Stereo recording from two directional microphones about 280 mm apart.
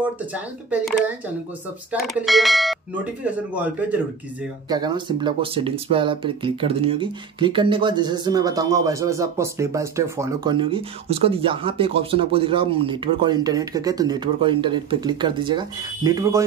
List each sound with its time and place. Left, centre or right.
0.3 s speech: centre